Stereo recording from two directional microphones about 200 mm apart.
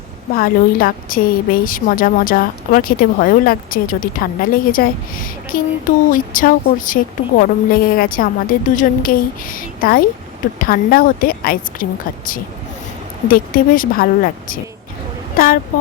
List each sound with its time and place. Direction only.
0.3 s a woman's voice: 45° left (ahead or behind)